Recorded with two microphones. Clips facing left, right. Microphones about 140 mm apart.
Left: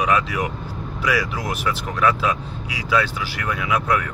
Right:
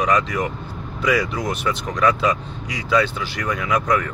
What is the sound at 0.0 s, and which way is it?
Speech, 10° left (ahead or behind).